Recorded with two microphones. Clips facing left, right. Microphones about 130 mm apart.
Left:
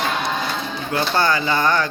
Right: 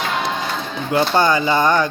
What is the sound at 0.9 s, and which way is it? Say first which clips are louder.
Speech: right 4 dB; 20° right (ahead or behind).